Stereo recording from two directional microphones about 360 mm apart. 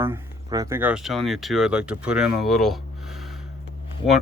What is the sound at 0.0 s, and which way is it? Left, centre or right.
Speech, centre.